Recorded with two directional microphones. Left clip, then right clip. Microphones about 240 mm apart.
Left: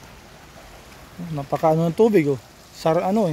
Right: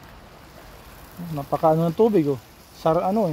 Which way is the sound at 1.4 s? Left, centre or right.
Centre.